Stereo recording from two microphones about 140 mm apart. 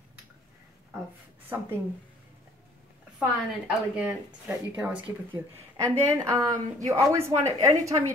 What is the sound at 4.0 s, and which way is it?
Speech, 10° right (ahead or behind).